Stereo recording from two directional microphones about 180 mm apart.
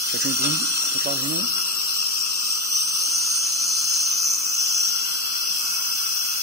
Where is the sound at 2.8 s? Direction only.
Centre (ahead or behind).